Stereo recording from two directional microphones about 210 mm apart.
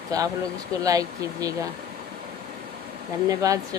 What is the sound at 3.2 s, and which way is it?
Speech, 15° right (ahead or behind).